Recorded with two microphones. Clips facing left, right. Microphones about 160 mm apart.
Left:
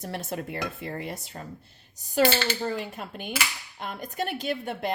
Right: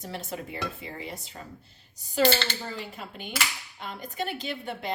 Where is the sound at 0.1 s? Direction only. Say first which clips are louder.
Left 3 dB; 55° left (ahead or behind).